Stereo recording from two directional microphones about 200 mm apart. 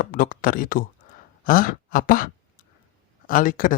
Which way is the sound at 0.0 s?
45° left (ahead or behind).